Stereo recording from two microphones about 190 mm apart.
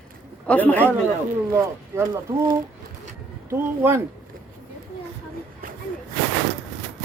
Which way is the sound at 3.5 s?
15° right (ahead or behind).